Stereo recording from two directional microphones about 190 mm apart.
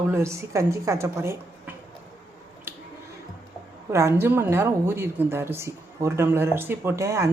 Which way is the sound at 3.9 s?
15° right (ahead or behind).